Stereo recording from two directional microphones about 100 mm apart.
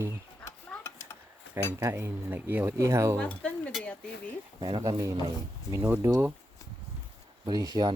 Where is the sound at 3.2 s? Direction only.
15° left (ahead or behind).